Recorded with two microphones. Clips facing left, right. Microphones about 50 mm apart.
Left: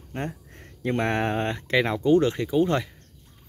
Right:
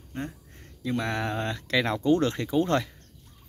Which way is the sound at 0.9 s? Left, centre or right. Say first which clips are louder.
Left 4 dB; left.